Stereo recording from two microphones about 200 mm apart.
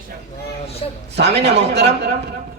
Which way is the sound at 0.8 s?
30° left (ahead or behind).